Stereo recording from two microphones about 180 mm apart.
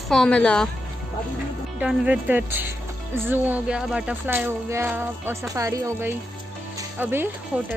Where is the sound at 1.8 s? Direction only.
5° right (ahead or behind).